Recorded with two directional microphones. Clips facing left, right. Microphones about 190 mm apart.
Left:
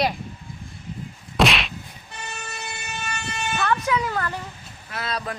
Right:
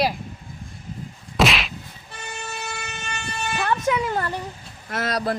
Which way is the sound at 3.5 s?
15° right (ahead or behind).